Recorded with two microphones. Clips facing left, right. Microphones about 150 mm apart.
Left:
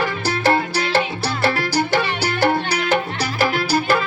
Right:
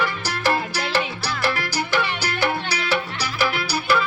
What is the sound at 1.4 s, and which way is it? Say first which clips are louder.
Music: left 5 dB; 50° left (ahead or behind).